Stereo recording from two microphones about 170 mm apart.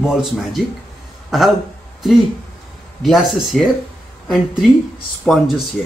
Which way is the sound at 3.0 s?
Centre (ahead or behind).